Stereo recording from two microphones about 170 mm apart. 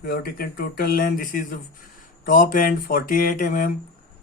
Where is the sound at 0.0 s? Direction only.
60° left (ahead or behind).